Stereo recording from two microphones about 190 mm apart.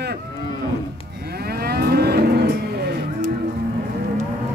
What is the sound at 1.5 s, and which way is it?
Moo, 55° right (ahead or behind).